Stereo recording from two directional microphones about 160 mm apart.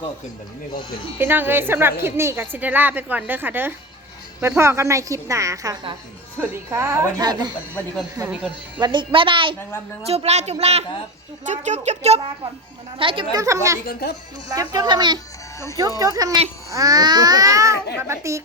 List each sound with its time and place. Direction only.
1.2 s a woman's voice: 15° right (ahead or behind)
8.8 s speech: 30° right (ahead or behind)
13.0 s speech: 35° right (ahead or behind)
13.3 s speech: 20° right (ahead or behind)
13.8 s speech: 90° left
14.5 s a woman's voice: 25° right (ahead or behind)